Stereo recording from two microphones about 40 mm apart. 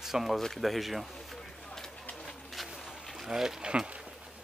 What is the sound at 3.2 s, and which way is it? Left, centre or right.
Speech, centre.